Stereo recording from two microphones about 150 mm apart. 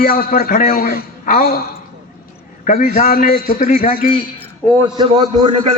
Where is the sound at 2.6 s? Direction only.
65° left (ahead or behind).